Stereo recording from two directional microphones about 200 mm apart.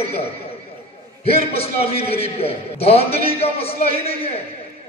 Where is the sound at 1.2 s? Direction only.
30° left (ahead or behind).